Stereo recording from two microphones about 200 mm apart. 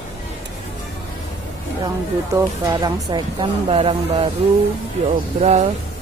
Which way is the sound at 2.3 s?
20° right (ahead or behind).